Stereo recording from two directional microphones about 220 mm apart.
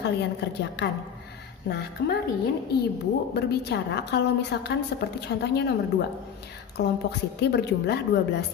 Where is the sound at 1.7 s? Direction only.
50° left (ahead or behind).